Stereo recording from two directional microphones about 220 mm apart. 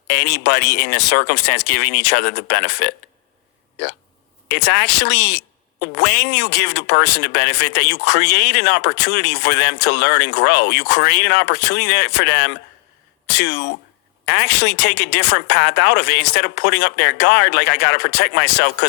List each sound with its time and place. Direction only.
0.1 s speech: 50° left (ahead or behind)
4.4 s speech: 50° left (ahead or behind)